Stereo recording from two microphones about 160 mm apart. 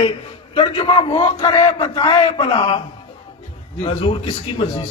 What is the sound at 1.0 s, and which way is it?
A man's voice, 25° left (ahead or behind).